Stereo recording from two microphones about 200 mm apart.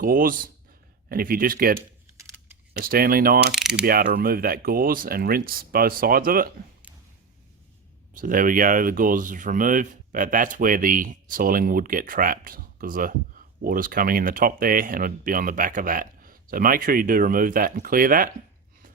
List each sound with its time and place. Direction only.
0.0 s speech: 45° right (ahead or behind)
3.5 s mechanisms: 5° right (ahead or behind)
3.8 s speech: 45° right (ahead or behind)
8.1 s speech: 45° right (ahead or behind)